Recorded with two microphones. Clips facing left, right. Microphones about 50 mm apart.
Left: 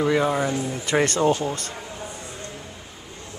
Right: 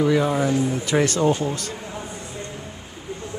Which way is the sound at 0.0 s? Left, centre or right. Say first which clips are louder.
Right 1 dB; centre.